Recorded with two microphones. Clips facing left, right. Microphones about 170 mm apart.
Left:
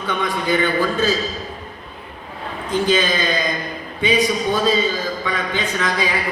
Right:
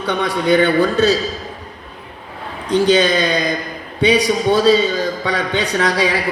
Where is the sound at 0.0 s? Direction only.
75° right (ahead or behind).